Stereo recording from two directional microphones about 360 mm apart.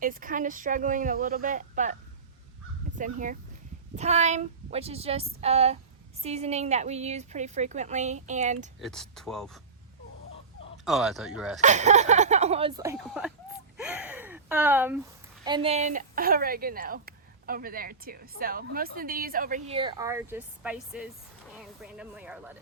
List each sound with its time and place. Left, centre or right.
0.0 s speech: right
3.0 s a woman's voice: right
8.8 s speech: centre
10.8 s speech: centre
11.6 s a woman's voice: centre
13.7 s gasp: centre
15.4 s speech: centre